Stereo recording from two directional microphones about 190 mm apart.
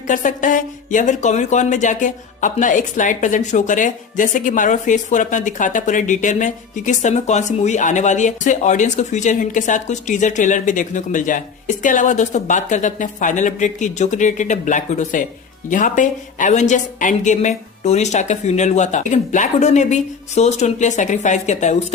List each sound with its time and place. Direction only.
0.1 s speech: 45° left (ahead or behind)